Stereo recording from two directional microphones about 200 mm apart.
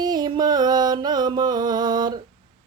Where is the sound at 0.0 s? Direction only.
20° right (ahead or behind).